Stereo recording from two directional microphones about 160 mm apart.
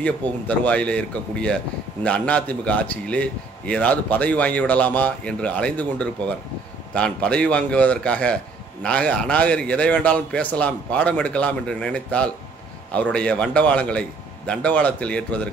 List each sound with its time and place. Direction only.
0.5 s a man's voice: 10° left (ahead or behind)